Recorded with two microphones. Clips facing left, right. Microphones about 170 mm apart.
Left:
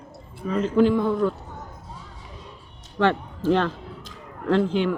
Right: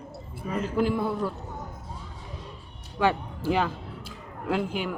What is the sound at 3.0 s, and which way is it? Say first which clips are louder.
A woman's voice: left 3 dB; 10° right (ahead or behind).